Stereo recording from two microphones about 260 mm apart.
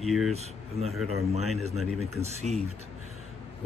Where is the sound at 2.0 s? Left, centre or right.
Right.